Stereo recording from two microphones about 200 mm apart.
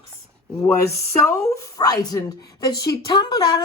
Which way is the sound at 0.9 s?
15° left (ahead or behind).